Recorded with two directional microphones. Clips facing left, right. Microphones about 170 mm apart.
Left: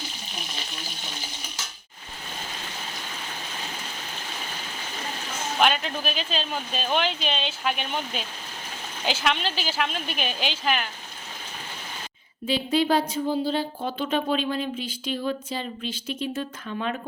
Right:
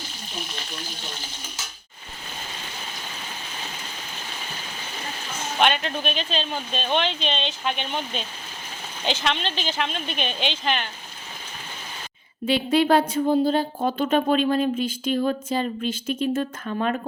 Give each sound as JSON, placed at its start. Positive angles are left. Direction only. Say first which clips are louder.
{"t": 5.5, "sound": "speech", "louder": "right 1 dB", "side_deg": 0}
{"t": 12.5, "sound": "speech", "louder": "right 3 dB", "side_deg": -65}